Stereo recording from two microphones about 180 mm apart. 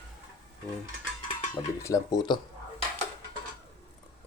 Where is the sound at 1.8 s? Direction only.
20° left (ahead or behind).